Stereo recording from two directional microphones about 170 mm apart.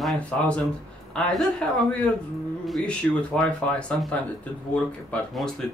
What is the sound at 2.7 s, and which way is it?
Speech, 5° left (ahead or behind).